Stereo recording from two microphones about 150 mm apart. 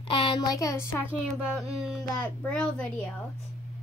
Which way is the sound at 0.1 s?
35° left (ahead or behind).